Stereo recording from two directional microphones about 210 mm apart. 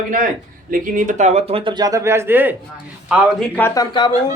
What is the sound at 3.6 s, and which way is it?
Speech, 15° left (ahead or behind).